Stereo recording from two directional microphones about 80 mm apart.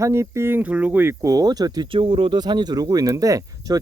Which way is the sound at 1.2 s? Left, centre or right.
Right.